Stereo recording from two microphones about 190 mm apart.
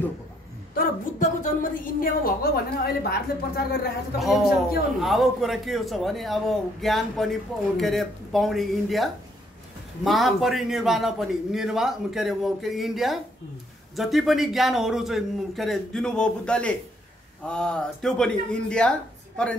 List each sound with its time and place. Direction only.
0.7 s a woman's voice: 40° left (ahead or behind)
4.2 s a man's voice: centre (ahead or behind)